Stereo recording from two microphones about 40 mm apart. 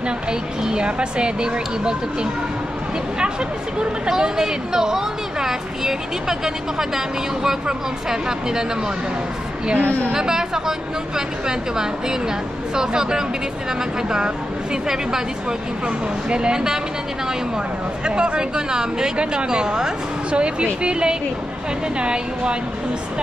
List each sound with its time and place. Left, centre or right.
0.3 s a woman's voice: right
4.0 s speech: centre
9.8 s a woman's voice: right
10.1 s speech: centre
16.3 s a woman's voice: right
18.0 s a woman's voice: right